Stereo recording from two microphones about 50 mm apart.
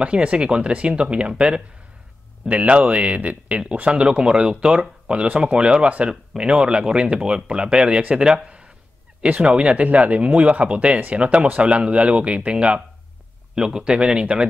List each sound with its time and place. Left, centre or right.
0.0 s speech: right
2.4 s speech: right
4.0 s speech: centre